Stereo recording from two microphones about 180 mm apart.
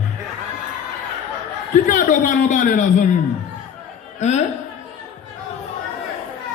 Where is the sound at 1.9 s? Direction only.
45° left (ahead or behind).